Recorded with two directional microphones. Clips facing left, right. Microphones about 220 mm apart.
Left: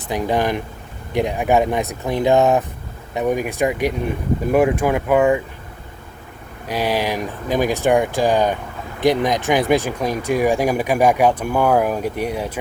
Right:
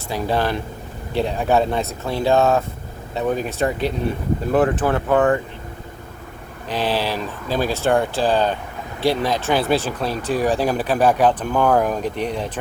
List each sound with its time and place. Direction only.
0.1 s speech: 15° left (ahead or behind)
6.7 s speech: 10° left (ahead or behind)